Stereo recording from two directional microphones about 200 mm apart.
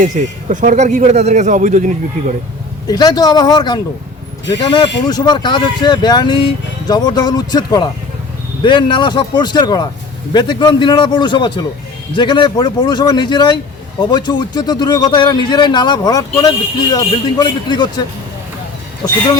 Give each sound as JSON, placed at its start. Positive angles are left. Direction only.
{"t": 0.0, "sound": "speech", "side_deg": -35}
{"t": 2.8, "sound": "speech", "side_deg": 20}